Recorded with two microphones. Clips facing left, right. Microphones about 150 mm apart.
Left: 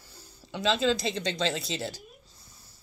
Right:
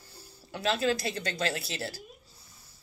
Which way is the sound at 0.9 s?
5° right (ahead or behind).